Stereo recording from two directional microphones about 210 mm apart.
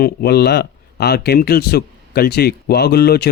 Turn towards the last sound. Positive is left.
turn(degrees=50)  # may be behind; listen again after turning